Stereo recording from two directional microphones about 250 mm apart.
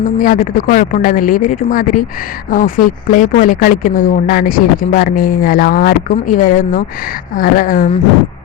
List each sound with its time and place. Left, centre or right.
0.2 s speech: left